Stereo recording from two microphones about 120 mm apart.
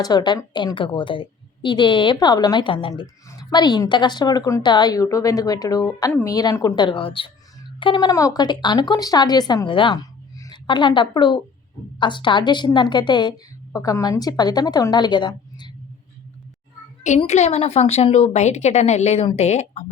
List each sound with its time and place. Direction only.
0.0 s a woman's voice: 35° left (ahead or behind)
6.7 s a woman's voice: 45° left (ahead or behind)
13.7 s a woman's voice: 30° left (ahead or behind)
17.2 s a woman's voice: 65° left (ahead or behind)